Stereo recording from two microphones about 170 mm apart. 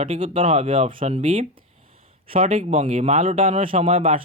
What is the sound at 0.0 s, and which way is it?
Speech, 35° right (ahead or behind).